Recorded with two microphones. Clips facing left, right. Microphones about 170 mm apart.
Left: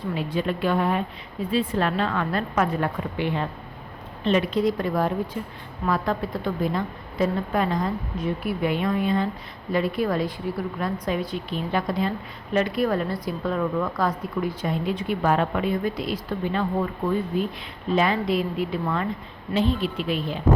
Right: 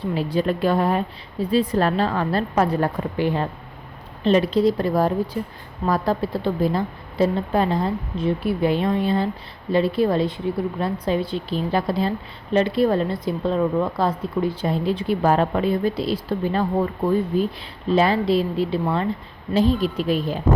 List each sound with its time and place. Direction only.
0.1 s a woman's voice: 35° right (ahead or behind)